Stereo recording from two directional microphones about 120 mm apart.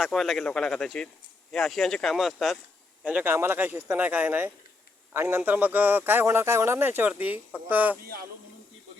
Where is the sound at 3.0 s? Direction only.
10° right (ahead or behind).